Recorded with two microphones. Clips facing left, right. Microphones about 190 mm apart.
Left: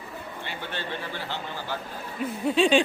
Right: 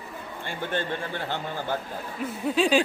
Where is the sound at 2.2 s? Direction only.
Centre (ahead or behind).